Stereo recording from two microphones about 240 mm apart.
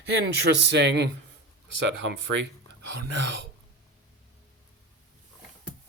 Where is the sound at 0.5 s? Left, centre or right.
Right.